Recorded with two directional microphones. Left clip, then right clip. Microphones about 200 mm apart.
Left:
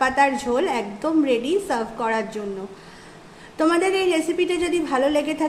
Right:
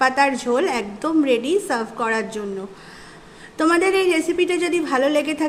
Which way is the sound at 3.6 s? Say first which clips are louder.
Right 2 dB; 15° right (ahead or behind).